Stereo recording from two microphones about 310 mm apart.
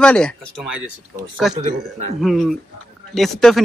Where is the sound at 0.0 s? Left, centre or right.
Centre.